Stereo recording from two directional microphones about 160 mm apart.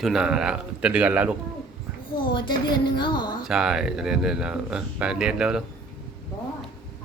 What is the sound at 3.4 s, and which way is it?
Speech, 5° right (ahead or behind).